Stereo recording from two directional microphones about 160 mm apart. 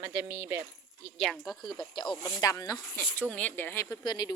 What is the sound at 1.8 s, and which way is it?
Speech, 30° left (ahead or behind).